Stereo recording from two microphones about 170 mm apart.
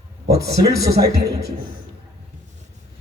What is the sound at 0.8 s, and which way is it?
Speech, 70° right (ahead or behind).